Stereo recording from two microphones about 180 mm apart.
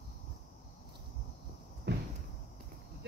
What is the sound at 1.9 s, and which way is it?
Cupboard open or close, 80° right.